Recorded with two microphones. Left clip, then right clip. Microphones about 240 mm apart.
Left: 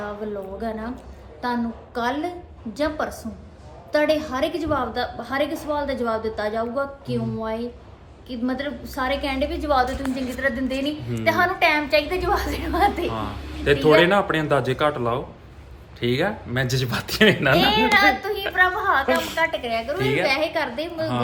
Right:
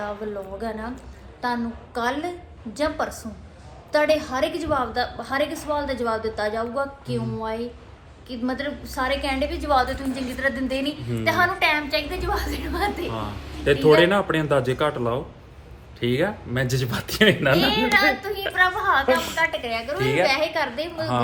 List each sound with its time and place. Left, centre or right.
0.2 s a woman's voice: centre
13.9 s speech: centre
17.6 s a woman's voice: centre
19.0 s speech: centre
19.4 s a woman's voice: centre
20.0 s speech: centre
20.2 s a woman's voice: centre